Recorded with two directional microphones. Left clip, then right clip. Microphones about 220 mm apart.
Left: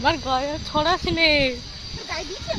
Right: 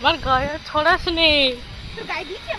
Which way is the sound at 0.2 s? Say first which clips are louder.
Right 4 dB; 15° left (ahead or behind).